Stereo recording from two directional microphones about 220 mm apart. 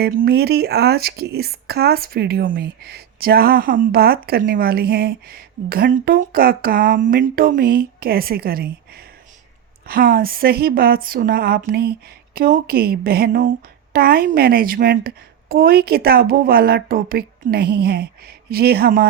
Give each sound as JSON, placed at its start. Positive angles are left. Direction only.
{"t": 0.0, "sound": "speech", "side_deg": -45}